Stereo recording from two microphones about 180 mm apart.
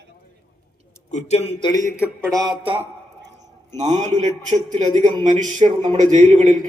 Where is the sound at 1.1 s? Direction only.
35° left (ahead or behind).